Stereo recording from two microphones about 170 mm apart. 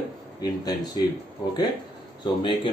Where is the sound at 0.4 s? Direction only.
25° left (ahead or behind).